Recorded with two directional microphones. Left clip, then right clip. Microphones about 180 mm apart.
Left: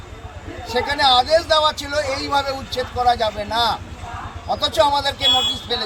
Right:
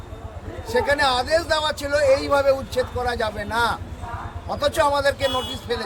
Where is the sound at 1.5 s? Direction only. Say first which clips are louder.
Left 4 dB; 35° right (ahead or behind).